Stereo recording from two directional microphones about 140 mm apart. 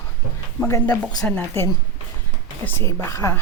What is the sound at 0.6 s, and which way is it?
Speech, 15° left (ahead or behind).